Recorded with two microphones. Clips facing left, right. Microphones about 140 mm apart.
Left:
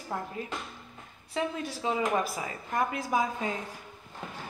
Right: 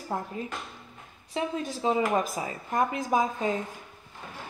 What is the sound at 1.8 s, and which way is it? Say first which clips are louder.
A woman's voice: right 3 dB; 30° right (ahead or behind).